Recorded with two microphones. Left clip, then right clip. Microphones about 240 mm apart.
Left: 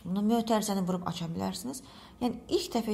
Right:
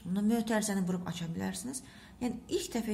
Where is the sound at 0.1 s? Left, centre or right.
Centre.